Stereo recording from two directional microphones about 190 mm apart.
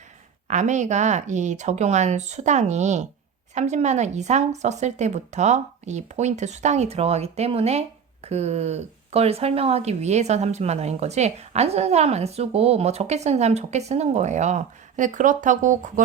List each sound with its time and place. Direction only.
0.4 s speech: 40° right (ahead or behind)